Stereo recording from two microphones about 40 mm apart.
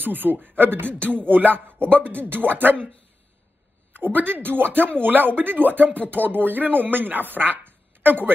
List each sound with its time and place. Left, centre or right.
0.0 s speech: right
3.9 s speech: right